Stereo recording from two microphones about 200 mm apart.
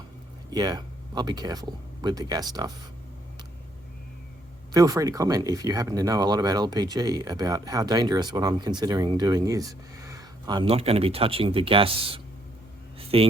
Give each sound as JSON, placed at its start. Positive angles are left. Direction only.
{"t": 0.5, "sound": "speech", "side_deg": -20}
{"t": 4.7, "sound": "speech", "side_deg": -15}
{"t": 13.0, "sound": "a sound", "side_deg": -30}